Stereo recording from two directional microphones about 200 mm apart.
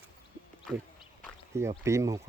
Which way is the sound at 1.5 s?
15° right (ahead or behind).